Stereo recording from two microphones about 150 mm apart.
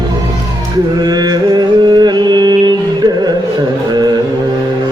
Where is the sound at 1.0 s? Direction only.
25° right (ahead or behind).